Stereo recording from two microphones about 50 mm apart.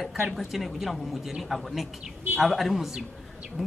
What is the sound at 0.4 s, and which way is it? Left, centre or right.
Speech, centre.